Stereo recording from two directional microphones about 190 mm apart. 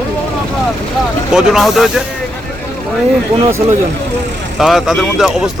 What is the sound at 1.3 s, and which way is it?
Speech, centre (ahead or behind).